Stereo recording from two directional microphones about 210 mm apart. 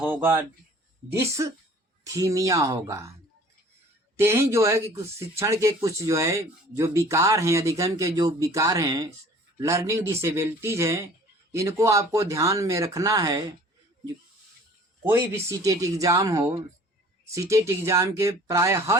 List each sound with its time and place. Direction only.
0.0 s speech: 10° right (ahead or behind)
4.2 s speech: 15° right (ahead or behind)
15.0 s speech: 10° right (ahead or behind)